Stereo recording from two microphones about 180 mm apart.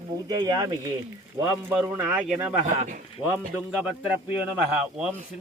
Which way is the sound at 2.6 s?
40° right (ahead or behind).